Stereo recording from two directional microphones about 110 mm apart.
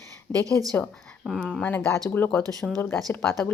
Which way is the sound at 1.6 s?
15° left (ahead or behind).